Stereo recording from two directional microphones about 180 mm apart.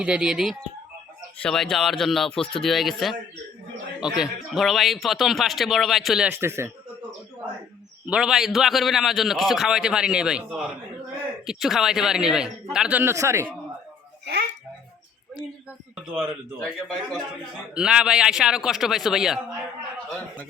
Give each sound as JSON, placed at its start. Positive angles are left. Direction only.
{"t": 0.0, "sound": "speech", "side_deg": -5}
{"t": 8.0, "sound": "speech", "side_deg": -5}
{"t": 14.3, "sound": "music", "side_deg": -70}
{"t": 16.1, "sound": "speech", "side_deg": 0}